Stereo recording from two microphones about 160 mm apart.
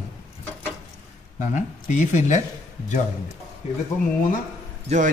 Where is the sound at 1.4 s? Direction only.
50° left (ahead or behind).